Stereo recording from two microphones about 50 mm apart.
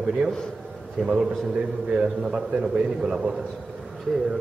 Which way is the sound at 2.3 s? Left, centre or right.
Right.